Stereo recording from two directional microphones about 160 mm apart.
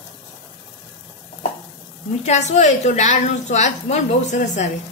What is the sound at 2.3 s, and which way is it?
A woman's voice, 45° left (ahead or behind).